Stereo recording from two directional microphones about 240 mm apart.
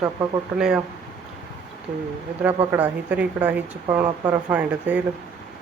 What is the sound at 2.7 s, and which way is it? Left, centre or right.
Speech, centre.